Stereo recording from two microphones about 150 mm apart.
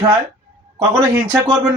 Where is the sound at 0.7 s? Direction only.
20° right (ahead or behind).